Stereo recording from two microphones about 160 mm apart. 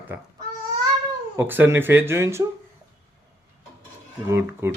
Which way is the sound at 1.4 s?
10° right (ahead or behind).